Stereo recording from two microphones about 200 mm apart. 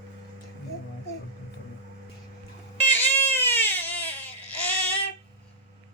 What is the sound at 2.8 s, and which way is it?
Crying, 10° left (ahead or behind).